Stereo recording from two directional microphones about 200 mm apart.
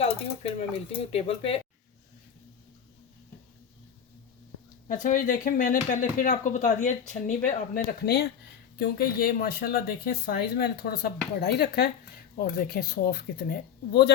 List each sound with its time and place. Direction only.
0.0 s speech: 30° left (ahead or behind)
4.9 s speech: 40° left (ahead or behind)